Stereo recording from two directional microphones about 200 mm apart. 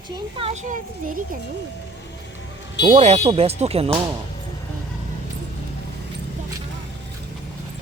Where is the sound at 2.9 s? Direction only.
35° right (ahead or behind).